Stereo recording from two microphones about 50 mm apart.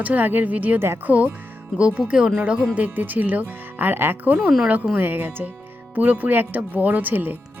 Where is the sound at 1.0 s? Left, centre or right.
Right.